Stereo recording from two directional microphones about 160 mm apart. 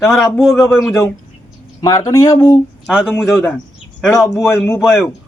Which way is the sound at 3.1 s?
15° left (ahead or behind).